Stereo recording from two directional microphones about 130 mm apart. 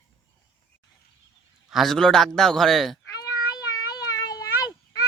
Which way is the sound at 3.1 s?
30° left (ahead or behind).